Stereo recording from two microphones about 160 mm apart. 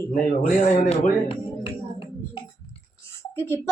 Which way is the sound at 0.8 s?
45° left (ahead or behind).